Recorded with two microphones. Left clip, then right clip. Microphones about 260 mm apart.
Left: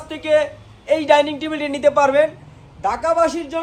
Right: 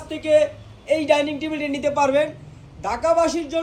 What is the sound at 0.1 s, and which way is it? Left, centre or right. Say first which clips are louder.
A man's voice: even; left.